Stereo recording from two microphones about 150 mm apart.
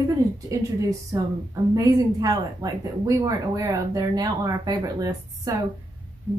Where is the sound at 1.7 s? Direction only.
25° right (ahead or behind).